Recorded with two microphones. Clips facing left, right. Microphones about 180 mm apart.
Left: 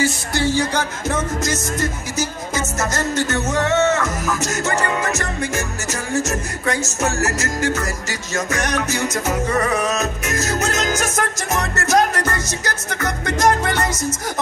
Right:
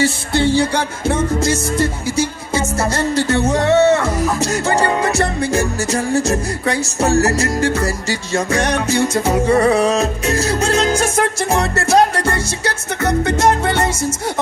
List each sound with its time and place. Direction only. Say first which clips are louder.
0.0 s music: right 4 dB; 30° right (ahead or behind)